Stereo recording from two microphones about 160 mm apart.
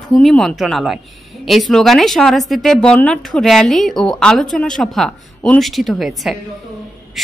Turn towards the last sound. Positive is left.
turn(degrees=0)  # may be behind; listen again after turning